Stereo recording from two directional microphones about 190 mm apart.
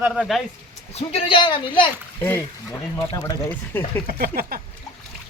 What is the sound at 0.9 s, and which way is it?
Speech, 30° left (ahead or behind).